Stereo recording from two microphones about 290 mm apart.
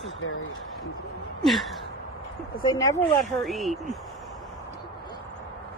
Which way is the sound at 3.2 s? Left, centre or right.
Centre.